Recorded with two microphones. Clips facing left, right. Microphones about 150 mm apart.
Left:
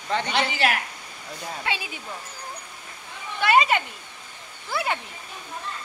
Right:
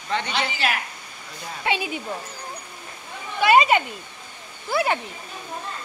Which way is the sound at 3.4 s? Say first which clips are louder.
Right 3 dB; 15° right (ahead or behind).